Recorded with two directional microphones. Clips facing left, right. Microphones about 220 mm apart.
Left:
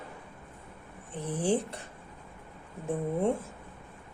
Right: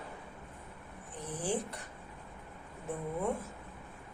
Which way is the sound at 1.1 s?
30° left (ahead or behind).